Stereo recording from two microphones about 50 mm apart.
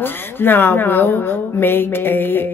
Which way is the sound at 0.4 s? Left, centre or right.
Left.